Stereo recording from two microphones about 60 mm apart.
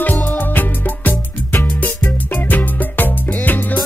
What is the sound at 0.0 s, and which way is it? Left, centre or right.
Music, left.